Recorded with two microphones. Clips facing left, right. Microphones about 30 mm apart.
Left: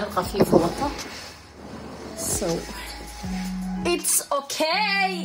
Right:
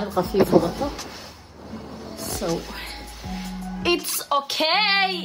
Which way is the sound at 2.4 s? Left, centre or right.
Centre.